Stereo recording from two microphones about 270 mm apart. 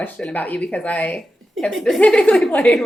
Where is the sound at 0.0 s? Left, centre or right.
Centre.